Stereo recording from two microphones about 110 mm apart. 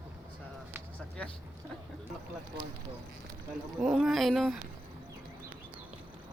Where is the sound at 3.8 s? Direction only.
5° right (ahead or behind).